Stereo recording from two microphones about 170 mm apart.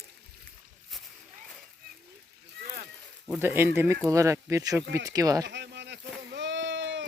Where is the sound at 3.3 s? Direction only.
10° right (ahead or behind).